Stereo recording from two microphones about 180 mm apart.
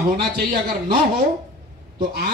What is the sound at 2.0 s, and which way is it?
Speech, 55° right (ahead or behind).